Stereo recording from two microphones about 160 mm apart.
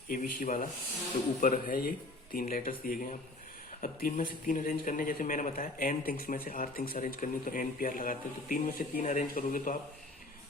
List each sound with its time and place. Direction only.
0.1 s speech: 55° left (ahead or behind)